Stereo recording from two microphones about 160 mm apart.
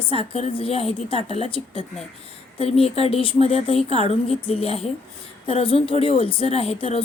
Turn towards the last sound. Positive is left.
turn(degrees=35)  # may be behind; listen again after turning